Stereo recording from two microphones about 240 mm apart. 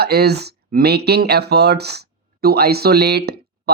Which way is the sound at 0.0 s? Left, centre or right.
Right.